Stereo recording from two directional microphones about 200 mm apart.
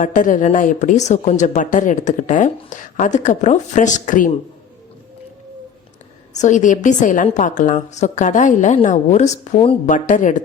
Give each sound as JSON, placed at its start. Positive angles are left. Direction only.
{"t": 0.0, "sound": "a woman's voice", "side_deg": 40}
{"t": 6.3, "sound": "a woman's voice", "side_deg": 35}